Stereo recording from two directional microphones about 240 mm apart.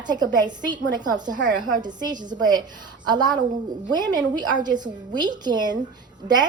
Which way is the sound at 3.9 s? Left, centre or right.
Centre.